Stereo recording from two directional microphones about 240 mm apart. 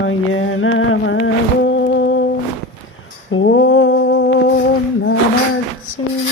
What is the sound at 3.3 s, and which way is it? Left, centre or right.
Humming, left.